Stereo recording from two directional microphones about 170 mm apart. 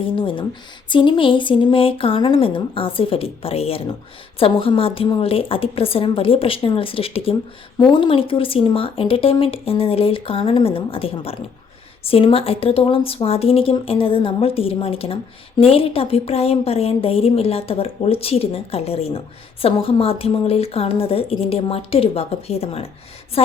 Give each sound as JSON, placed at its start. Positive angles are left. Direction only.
{"t": 0.0, "sound": "a woman's voice", "side_deg": 30}